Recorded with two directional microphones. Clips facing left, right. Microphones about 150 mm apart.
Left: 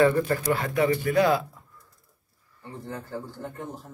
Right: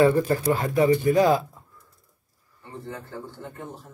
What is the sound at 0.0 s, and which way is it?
Speech, 20° right (ahead or behind).